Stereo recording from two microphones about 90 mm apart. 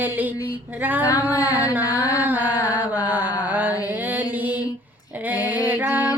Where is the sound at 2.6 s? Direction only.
20° right (ahead or behind).